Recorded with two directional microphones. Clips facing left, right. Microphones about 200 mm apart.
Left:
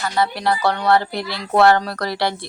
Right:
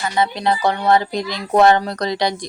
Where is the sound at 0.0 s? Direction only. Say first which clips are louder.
Right 1 dB; 20° right (ahead or behind).